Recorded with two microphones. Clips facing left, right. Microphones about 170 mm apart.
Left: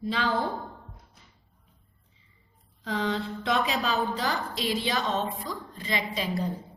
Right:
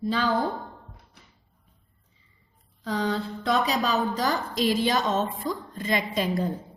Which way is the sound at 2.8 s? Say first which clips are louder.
Right 2 dB; 40° right (ahead or behind).